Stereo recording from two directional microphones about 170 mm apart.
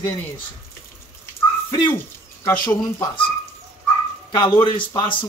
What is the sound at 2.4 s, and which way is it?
Speech, 15° left (ahead or behind).